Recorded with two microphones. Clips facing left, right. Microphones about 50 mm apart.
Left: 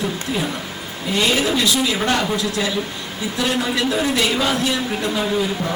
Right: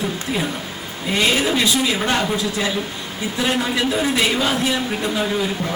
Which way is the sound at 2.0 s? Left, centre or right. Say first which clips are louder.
Even; centre.